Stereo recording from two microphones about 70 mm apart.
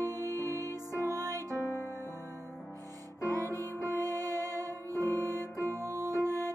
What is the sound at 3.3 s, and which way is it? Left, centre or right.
Music, right.